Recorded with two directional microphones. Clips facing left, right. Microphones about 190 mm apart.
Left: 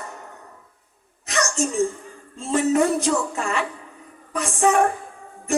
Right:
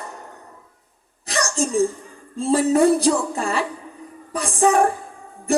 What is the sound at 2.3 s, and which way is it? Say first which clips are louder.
A woman's voice: right 2 dB; 35° right (ahead or behind).